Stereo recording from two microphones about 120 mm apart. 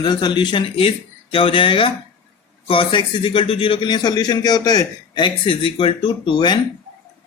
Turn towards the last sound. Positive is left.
turn(degrees=40)  # may be behind; listen again after turning